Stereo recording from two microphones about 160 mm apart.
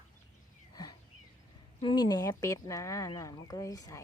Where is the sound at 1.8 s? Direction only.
25° left (ahead or behind).